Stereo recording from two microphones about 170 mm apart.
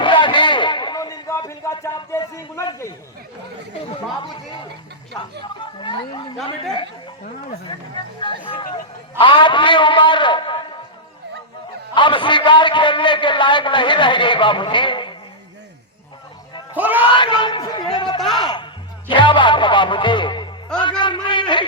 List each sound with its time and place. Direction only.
0.0 s a sound: 30° left (ahead or behind)
5.5 s a sound: 30° left (ahead or behind)
7.7 s a man's voice: 30° left (ahead or behind)
11.9 s a man's voice: 30° left (ahead or behind)
16.7 s speech: 10° right (ahead or behind)
17.1 s a man's voice: 30° left (ahead or behind)